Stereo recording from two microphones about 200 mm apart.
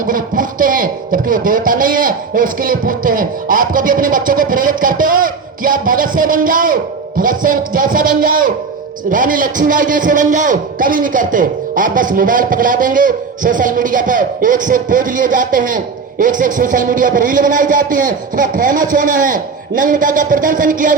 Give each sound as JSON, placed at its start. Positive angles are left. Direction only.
{"t": 0.0, "sound": "a man's voice", "side_deg": -45}